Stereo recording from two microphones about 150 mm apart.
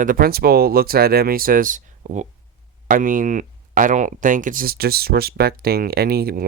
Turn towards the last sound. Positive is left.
turn(degrees=-90)